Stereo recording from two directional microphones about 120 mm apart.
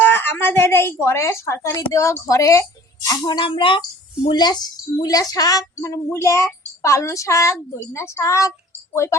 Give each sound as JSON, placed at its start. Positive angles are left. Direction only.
{"t": 0.0, "sound": "a woman's voice", "side_deg": 20}